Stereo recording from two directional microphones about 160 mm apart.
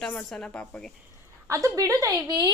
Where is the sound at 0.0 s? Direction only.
5° left (ahead or behind).